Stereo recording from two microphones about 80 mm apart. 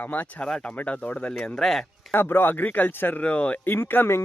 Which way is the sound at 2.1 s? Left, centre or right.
Left.